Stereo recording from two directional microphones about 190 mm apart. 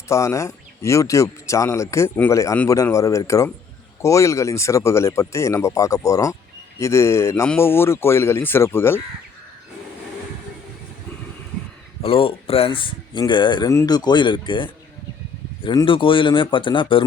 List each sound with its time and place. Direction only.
0.1 s speech: 15° left (ahead or behind)
12.0 s speech: 30° left (ahead or behind)